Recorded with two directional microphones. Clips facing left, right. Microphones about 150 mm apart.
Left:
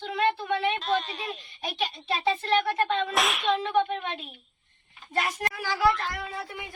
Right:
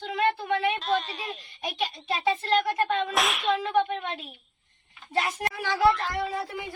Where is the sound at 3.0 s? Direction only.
Centre (ahead or behind).